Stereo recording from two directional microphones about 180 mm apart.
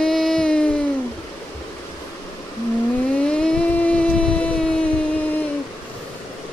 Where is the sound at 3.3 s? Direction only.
5° left (ahead or behind).